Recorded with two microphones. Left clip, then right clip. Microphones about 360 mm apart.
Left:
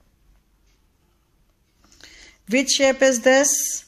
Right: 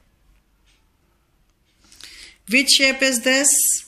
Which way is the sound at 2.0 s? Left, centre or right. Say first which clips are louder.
Right 5 dB; left.